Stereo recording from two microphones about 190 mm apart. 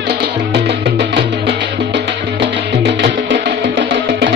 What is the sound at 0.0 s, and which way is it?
Music, 60° right (ahead or behind).